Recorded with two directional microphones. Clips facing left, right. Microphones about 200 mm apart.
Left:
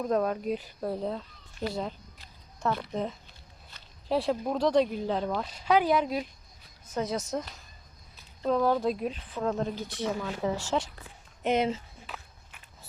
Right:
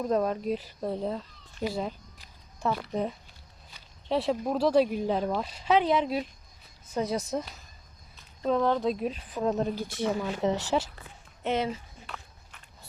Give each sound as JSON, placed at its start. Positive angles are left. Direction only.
{"t": 0.0, "sound": "speech", "side_deg": 0}
{"t": 2.6, "sound": "zipper", "side_deg": -10}
{"t": 4.1, "sound": "speech", "side_deg": 0}
{"t": 8.4, "sound": "speech", "side_deg": 5}
{"t": 9.3, "sound": "speech", "side_deg": -20}
{"t": 11.4, "sound": "speech", "side_deg": 20}
{"t": 12.0, "sound": "walk", "side_deg": 5}